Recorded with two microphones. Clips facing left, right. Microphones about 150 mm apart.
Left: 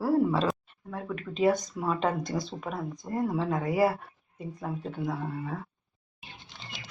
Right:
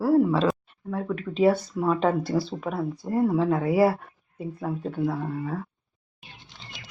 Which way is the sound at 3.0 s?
30° right (ahead or behind).